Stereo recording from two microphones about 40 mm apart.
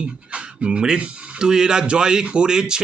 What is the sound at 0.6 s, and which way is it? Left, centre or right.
Speech, centre.